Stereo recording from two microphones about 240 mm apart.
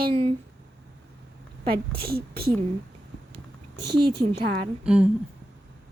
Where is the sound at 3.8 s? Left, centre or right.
Right.